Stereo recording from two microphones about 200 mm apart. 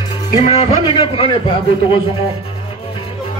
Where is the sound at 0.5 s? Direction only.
25° left (ahead or behind).